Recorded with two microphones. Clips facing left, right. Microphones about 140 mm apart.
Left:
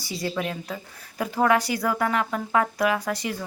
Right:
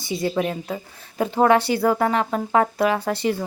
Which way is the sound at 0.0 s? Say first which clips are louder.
Right 6 dB; 25° right (ahead or behind).